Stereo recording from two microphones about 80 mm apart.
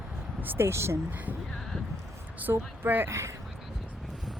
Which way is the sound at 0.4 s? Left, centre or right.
Right.